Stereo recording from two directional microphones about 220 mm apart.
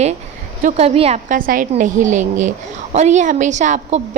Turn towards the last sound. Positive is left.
turn(degrees=-35)  # may be behind; listen again after turning